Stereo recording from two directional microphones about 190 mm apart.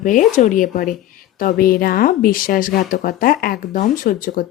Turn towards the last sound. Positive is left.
turn(degrees=45)  # may be behind; listen again after turning